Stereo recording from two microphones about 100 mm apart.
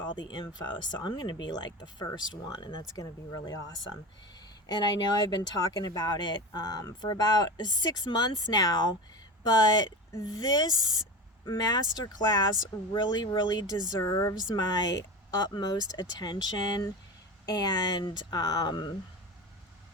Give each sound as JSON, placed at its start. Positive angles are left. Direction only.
{"t": 0.0, "sound": "speech", "side_deg": 45}
{"t": 2.9, "sound": "speech", "side_deg": 40}
{"t": 4.6, "sound": "speech", "side_deg": 45}